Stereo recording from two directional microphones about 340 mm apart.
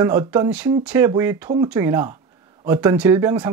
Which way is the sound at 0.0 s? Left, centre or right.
Centre.